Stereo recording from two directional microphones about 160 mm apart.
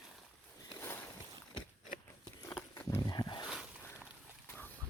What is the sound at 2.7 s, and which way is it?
Wild animals, 20° left (ahead or behind).